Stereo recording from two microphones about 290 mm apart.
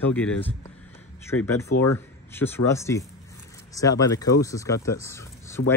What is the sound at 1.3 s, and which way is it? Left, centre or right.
Speech, left.